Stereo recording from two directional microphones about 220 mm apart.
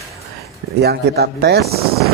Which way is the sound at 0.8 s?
45° right (ahead or behind).